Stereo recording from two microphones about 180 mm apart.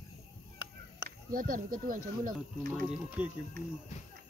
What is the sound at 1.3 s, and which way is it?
Speech, 50° right (ahead or behind).